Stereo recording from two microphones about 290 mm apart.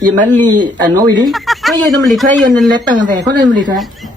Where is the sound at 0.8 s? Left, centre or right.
Centre.